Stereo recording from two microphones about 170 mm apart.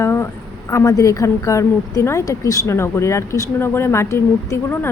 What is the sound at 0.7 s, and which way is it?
A woman's voice, 20° left (ahead or behind).